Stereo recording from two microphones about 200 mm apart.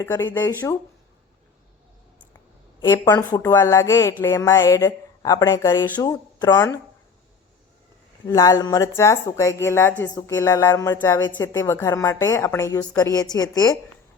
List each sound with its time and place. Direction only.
0.0 s speech: 10° left (ahead or behind)
2.8 s speech: 15° left (ahead or behind)
8.3 s speech: 15° left (ahead or behind)